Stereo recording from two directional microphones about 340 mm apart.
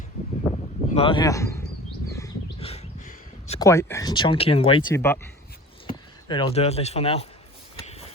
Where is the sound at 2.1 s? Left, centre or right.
Centre.